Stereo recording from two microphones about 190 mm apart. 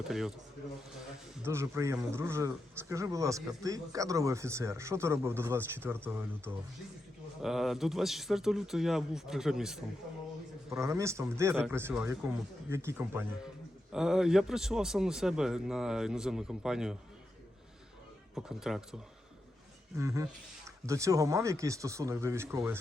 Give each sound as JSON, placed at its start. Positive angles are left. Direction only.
{"t": 0.1, "sound": "a man's voice", "side_deg": 0}
{"t": 1.5, "sound": "a man's voice", "side_deg": -15}
{"t": 7.4, "sound": "a man's voice", "side_deg": 0}
{"t": 10.7, "sound": "a man's voice", "side_deg": -15}
{"t": 18.3, "sound": "a man's voice", "side_deg": 0}
{"t": 20.0, "sound": "a man's voice", "side_deg": -15}